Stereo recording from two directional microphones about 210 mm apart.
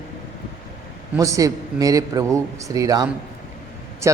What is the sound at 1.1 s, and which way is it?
A man's voice, 15° right (ahead or behind).